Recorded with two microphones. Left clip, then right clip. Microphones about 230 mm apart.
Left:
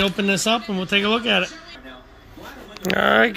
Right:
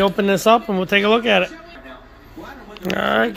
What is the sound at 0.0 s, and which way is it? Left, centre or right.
Speech, centre.